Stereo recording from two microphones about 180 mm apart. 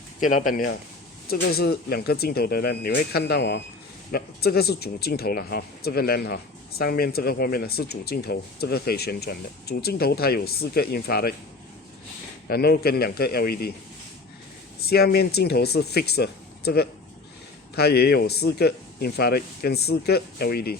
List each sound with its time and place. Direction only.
0.2 s speech: 45° left (ahead or behind)
12.5 s speech: 60° left (ahead or behind)
14.8 s speech: 60° left (ahead or behind)